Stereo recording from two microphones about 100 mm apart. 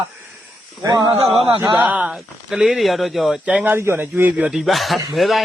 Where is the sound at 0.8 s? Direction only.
40° right (ahead or behind).